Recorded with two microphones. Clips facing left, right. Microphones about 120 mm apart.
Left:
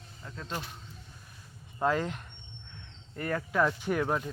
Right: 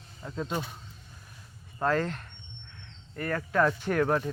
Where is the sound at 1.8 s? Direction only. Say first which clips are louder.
Right 1 dB; 15° left (ahead or behind).